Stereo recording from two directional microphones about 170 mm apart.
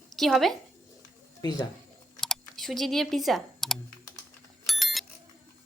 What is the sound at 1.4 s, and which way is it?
Speech, 25° left (ahead or behind).